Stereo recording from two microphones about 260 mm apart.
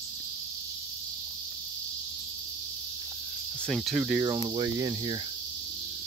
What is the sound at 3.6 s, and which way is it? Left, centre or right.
Cricket, centre.